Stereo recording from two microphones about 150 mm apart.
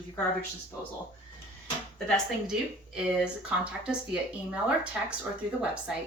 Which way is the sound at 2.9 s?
5° right (ahead or behind).